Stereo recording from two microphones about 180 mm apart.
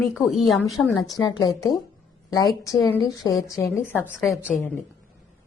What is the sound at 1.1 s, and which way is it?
A woman's voice, 20° left (ahead or behind).